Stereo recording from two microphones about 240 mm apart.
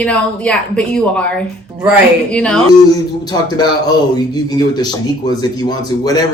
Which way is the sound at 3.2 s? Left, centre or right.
Centre.